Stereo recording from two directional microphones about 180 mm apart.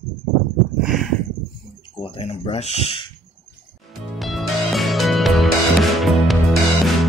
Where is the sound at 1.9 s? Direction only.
30° left (ahead or behind).